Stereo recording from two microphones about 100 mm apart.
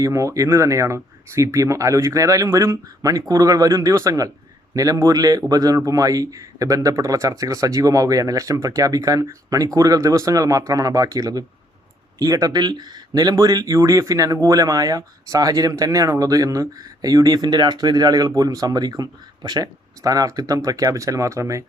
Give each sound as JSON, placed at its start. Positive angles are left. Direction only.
{"t": 0.0, "sound": "speech", "side_deg": -30}